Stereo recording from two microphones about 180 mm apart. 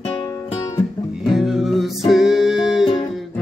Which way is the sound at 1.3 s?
Centre (ahead or behind).